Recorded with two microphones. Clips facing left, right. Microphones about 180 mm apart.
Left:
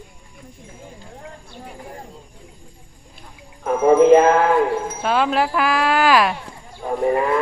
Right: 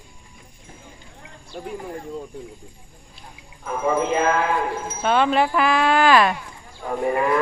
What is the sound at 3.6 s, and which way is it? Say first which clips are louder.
Speech: left 10 dB; 45° left (ahead or behind).